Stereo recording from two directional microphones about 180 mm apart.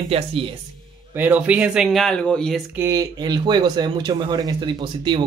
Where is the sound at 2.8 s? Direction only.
20° right (ahead or behind).